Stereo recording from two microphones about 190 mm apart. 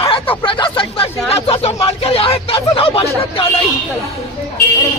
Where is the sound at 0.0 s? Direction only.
30° left (ahead or behind).